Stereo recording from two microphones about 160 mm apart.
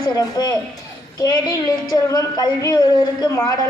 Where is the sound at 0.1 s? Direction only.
25° left (ahead or behind).